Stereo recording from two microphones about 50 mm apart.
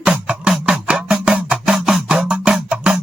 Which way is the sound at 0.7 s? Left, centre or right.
Right.